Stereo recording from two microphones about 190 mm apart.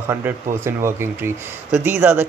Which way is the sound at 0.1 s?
15° right (ahead or behind).